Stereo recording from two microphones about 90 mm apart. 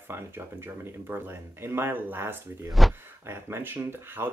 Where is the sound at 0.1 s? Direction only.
25° right (ahead or behind).